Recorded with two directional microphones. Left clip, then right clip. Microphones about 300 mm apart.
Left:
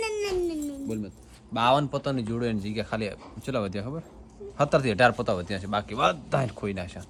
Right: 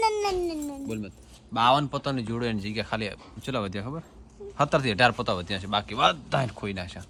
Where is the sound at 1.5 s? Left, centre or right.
Centre.